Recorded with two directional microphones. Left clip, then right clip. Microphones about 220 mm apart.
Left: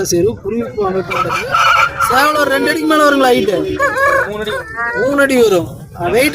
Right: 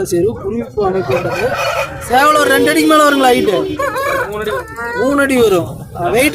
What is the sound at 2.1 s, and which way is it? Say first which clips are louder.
A man's voice: right 6 dB; centre (ahead or behind).